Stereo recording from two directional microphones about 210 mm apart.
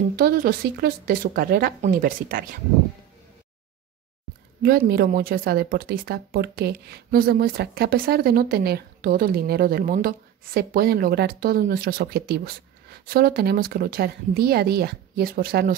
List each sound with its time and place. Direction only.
0.1 s speech: 45° right (ahead or behind)
4.6 s speech: 45° right (ahead or behind)